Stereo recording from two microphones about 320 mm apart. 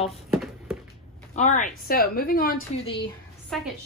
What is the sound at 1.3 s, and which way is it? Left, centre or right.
A woman's voice, left.